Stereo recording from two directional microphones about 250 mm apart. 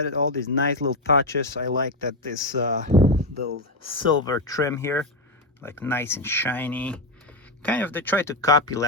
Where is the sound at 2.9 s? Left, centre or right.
Right.